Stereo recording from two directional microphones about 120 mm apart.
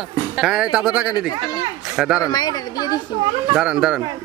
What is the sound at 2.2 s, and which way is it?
Speech, 35° left (ahead or behind).